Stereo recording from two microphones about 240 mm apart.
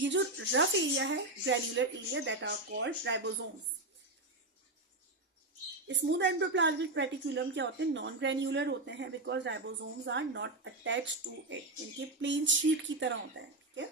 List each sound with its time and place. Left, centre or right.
0.0 s speech: right
5.9 s speech: right